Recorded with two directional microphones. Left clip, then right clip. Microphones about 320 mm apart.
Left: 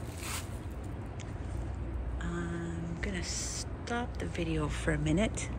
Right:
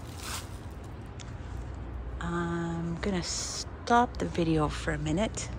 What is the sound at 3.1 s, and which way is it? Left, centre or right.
Music, centre.